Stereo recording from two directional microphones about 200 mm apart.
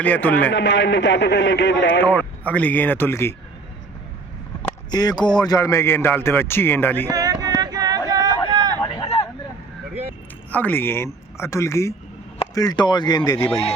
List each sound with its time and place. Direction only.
0.0 s a man's voice: 10° left (ahead or behind)
0.5 s a man's voice: 65° left (ahead or behind)
2.0 s a man's voice: 10° left (ahead or behind)
4.9 s a man's voice: 20° left (ahead or behind)
7.1 s a sound: 20° right (ahead or behind)
8.5 s vehicle: 20° right (ahead or behind)
8.8 s vehicle: 25° left (ahead or behind)
10.5 s a man's voice: 10° left (ahead or behind)
13.4 s speech: 5° left (ahead or behind)